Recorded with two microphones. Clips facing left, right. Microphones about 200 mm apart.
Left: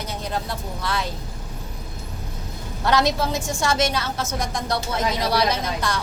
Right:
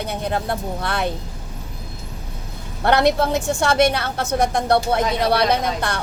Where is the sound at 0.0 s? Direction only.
60° right (ahead or behind).